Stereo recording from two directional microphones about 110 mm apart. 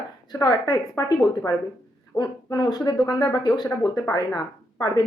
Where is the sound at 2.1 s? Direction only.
40° left (ahead or behind).